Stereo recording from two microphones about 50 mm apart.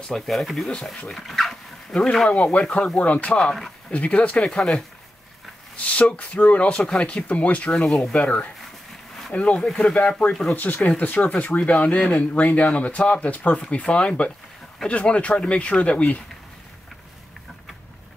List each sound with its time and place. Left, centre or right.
0.3 s speech: centre
1.1 s dog: centre
2.2 s speech: left
4.5 s speech: centre
5.8 s speech: left
7.7 s speech: centre
8.2 s speech: left
10.5 s speech: left